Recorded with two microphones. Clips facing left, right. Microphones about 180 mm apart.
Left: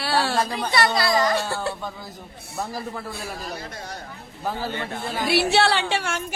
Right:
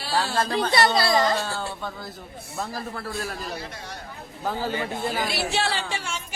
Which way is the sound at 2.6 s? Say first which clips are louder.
Left 2 dB; 15° left (ahead or behind).